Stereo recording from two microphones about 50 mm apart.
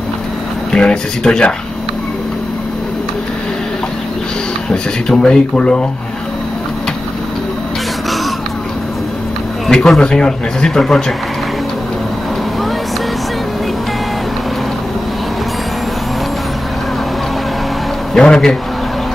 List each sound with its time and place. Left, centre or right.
0.7 s speech: centre
4.6 s speech: centre
9.7 s speech: centre
18.1 s speech: centre